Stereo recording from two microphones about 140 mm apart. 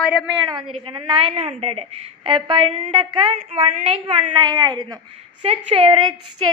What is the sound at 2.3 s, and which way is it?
Speech, 35° right (ahead or behind).